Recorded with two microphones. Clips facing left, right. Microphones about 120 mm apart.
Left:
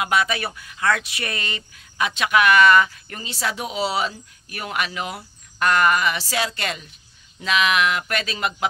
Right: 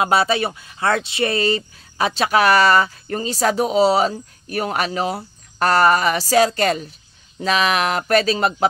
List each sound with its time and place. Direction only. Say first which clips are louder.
0.0 s speech: right 5 dB; 30° right (ahead or behind)